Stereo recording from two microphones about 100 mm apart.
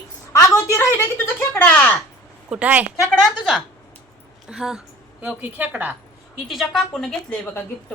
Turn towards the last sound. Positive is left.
turn(degrees=5)  # may be behind; listen again after turning